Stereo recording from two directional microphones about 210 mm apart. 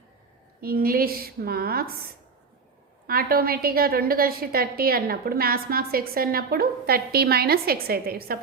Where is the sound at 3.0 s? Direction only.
45° right (ahead or behind).